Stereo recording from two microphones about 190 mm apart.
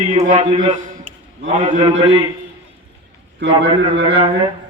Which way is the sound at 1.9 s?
80° right.